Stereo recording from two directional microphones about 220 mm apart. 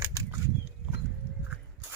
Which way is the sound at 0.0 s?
10° right (ahead or behind).